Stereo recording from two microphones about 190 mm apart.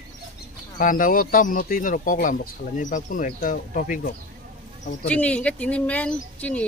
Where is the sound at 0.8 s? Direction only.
45° left (ahead or behind).